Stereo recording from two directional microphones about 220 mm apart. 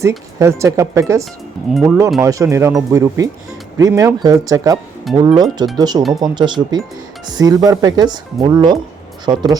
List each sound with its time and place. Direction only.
0.3 s speech: 15° right (ahead or behind)
2.2 s speech: 15° right (ahead or behind)